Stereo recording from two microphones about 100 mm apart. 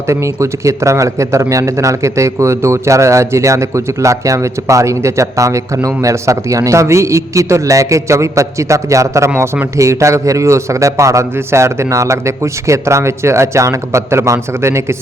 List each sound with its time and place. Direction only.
0.1 s a man's voice: 30° right (ahead or behind)
9.3 s a man's voice: 15° right (ahead or behind)
9.7 s a man's voice: 30° right (ahead or behind)